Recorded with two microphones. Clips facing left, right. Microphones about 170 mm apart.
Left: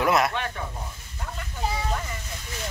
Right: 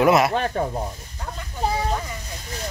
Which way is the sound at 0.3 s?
40° right (ahead or behind).